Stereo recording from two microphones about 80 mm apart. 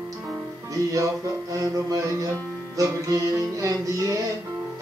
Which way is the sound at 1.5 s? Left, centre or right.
Right.